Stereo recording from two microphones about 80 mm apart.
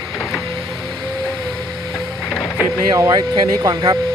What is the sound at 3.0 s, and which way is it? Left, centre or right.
Speech, right.